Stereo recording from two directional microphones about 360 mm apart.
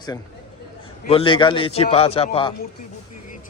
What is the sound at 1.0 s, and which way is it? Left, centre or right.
Speech, centre.